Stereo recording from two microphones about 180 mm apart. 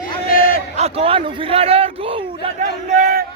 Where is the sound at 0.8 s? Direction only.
30° right (ahead or behind).